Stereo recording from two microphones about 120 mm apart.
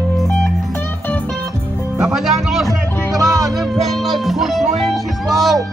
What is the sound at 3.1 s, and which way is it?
Music, 30° right (ahead or behind).